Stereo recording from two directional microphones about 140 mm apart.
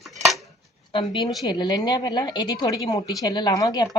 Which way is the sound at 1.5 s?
30° left (ahead or behind).